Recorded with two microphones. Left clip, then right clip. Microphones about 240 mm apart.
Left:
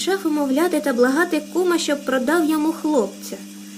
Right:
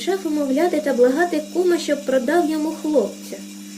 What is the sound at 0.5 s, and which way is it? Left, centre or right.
Speech, left.